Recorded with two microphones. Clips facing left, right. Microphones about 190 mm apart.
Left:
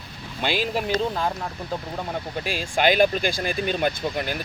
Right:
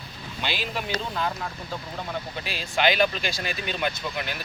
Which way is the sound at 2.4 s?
50° left (ahead or behind).